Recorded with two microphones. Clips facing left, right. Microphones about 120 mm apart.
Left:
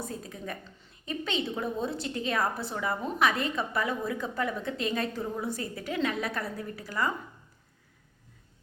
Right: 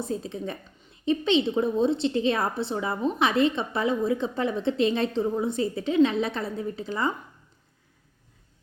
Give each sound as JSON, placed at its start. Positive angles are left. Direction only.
{"t": 0.0, "sound": "a woman's voice", "side_deg": -25}